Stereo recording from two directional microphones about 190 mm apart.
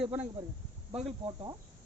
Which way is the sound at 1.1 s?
30° right (ahead or behind).